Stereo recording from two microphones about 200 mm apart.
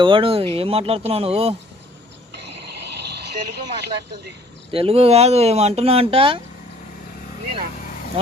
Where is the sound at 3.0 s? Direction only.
55° right (ahead or behind).